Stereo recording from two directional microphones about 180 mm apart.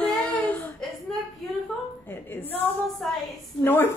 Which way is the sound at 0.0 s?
10° left (ahead or behind).